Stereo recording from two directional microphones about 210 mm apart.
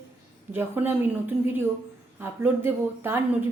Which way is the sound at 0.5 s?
10° right (ahead or behind).